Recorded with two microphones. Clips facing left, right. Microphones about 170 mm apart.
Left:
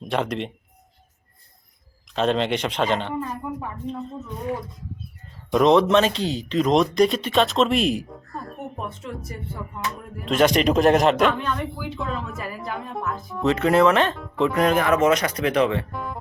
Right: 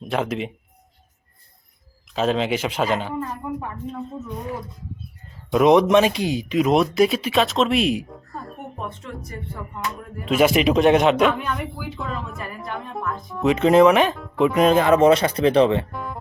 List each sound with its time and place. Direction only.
0.1 s a man's voice: 5° right (ahead or behind)
2.1 s a man's voice: 5° right (ahead or behind)
5.5 s a man's voice: 10° right (ahead or behind)
13.6 s speech: 20° right (ahead or behind)
15.9 s speech: centre (ahead or behind)